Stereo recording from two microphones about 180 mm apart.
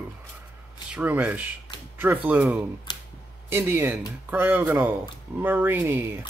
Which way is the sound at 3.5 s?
10° right (ahead or behind).